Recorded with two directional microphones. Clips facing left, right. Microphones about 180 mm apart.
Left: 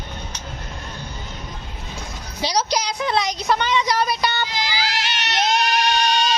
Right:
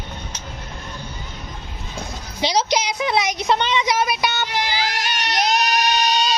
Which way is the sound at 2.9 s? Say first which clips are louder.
Right 1 dB; 10° right (ahead or behind).